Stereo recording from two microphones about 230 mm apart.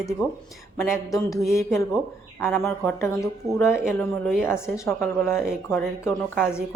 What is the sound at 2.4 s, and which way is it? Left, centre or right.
Speech, centre.